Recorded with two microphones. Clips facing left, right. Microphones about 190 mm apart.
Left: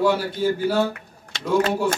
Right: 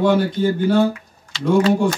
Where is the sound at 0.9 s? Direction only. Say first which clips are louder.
Right 2 dB; 55° left (ahead or behind).